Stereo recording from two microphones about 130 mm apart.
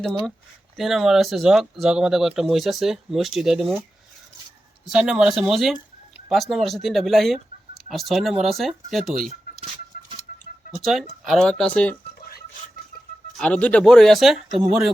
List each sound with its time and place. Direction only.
0.0 s speech: 5° left (ahead or behind)
4.9 s speech: 5° right (ahead or behind)
10.3 s a sound: 90° left
10.8 s speech: centre (ahead or behind)
13.3 s speech: 10° left (ahead or behind)